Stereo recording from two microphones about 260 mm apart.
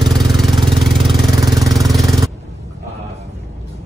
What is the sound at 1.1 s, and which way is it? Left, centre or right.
Vehicle, centre.